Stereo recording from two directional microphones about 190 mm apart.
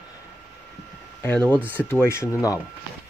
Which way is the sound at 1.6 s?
10° right (ahead or behind).